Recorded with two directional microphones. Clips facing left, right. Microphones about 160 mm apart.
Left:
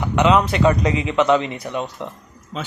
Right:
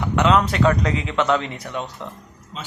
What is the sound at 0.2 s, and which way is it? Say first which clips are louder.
A man's voice: left 2 dB; 5° left (ahead or behind).